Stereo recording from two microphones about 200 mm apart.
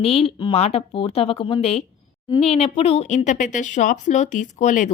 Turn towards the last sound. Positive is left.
turn(degrees=40)  # may be behind; listen again after turning